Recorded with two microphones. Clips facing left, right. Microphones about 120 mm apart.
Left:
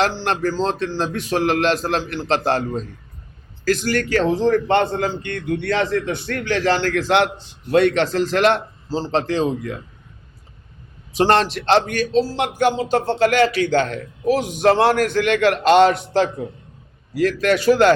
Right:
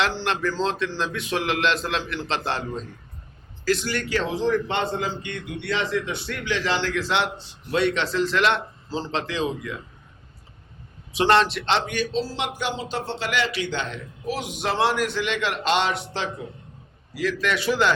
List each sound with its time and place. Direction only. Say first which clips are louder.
0.0 s a man's voice: left 4 dB; 40° left (ahead or behind)
11.1 s speech: left 3 dB; 40° left (ahead or behind)